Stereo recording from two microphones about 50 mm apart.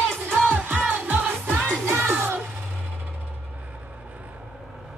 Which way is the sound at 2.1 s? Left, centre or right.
Right.